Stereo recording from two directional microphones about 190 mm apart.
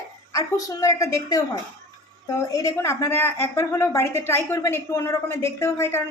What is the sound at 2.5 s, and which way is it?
A woman's voice, 15° left (ahead or behind).